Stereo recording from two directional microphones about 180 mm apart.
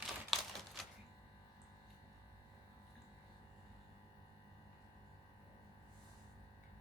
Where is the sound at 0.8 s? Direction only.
Centre (ahead or behind).